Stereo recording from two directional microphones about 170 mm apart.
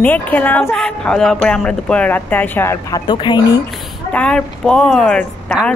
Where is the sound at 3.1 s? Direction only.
25° left (ahead or behind).